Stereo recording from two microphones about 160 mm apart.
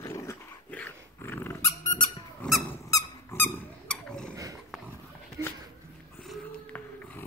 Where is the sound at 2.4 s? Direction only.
Centre (ahead or behind).